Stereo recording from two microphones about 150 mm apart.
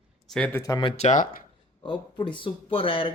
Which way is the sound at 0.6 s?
30° left (ahead or behind).